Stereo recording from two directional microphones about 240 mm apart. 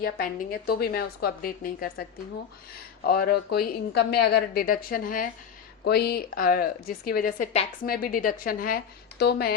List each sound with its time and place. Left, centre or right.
0.0 s a woman's voice: left